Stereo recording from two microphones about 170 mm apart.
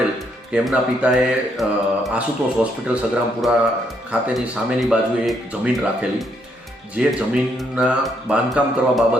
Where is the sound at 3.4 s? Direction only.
Centre (ahead or behind).